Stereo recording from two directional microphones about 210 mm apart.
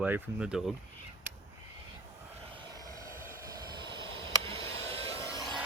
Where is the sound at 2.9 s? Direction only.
15° right (ahead or behind).